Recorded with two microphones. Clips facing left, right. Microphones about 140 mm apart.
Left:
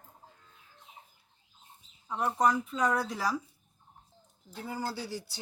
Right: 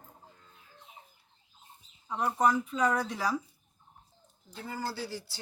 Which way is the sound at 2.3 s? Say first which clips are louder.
Right 1 dB; centre (ahead or behind).